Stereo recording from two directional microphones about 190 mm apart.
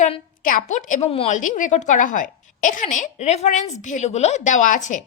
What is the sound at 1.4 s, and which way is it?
A woman's voice, 45° left (ahead or behind).